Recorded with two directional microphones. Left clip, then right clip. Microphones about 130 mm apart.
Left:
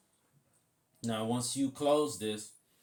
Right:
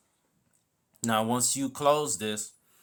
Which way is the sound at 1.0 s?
80° right.